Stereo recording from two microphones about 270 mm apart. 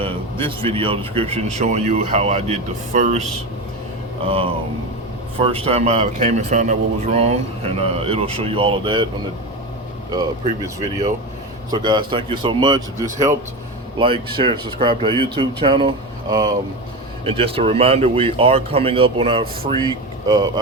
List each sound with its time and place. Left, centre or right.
0.0 s a man's voice: centre
4.3 s a man's voice: right
10.4 s speech: left
11.7 s a man's voice: centre